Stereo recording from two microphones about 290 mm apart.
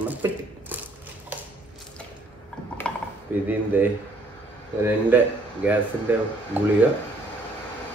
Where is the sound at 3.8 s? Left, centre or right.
Centre.